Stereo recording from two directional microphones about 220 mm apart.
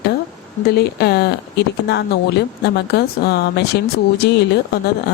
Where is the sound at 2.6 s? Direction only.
45° left (ahead or behind).